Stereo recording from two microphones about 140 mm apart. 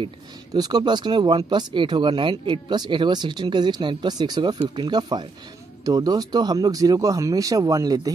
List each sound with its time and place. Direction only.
0.5 s speech: 30° right (ahead or behind)